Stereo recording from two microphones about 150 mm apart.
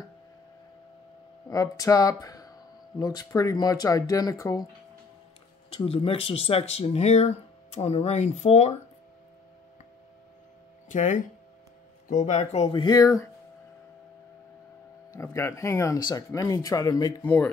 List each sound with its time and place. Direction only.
1.5 s speech: 20° left (ahead or behind)
5.7 s speech: 40° left (ahead or behind)
10.9 s speech: 60° left (ahead or behind)
12.8 s speech: 25° left (ahead or behind)
15.1 s speech: 20° left (ahead or behind)
17.2 s speech: 10° left (ahead or behind)